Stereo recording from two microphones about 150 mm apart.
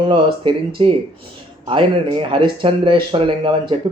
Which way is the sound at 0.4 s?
35° right (ahead or behind).